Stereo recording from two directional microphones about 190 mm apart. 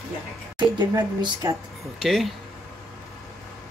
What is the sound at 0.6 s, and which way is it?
Speech, 25° right (ahead or behind).